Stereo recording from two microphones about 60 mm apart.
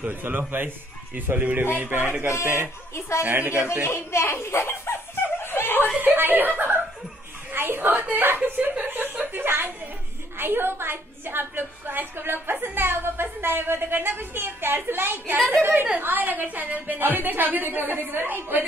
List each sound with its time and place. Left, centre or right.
0.0 s a woman's voice: right
3.8 s a child's voice: left
5.4 s snicker: left
5.9 s a woman's voice: right
8.6 s chuckle: right
10.4 s a woman's voice: right